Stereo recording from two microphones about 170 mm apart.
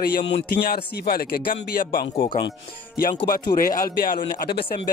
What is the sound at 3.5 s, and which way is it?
Speech, 55° left (ahead or behind).